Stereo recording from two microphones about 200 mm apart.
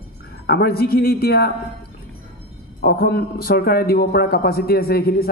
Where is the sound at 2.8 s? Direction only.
50° left (ahead or behind).